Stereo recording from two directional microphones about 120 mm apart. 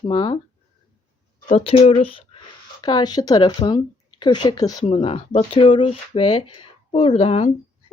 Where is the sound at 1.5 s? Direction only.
65° left (ahead or behind).